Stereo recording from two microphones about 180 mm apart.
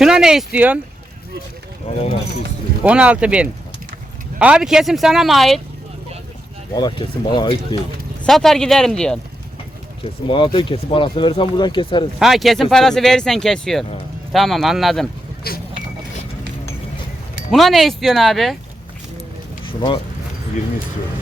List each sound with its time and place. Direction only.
0.0 s speech: 5° right (ahead or behind)
2.8 s speech: 5° right (ahead or behind)
6.7 s speech: 25° left (ahead or behind)
8.2 s speech: 5° left (ahead or behind)
10.0 s speech: 30° left (ahead or behind)
12.2 s speech: centre (ahead or behind)
15.5 s speech: 60° left (ahead or behind)
17.5 s speech: centre (ahead or behind)
19.6 s speech: 30° left (ahead or behind)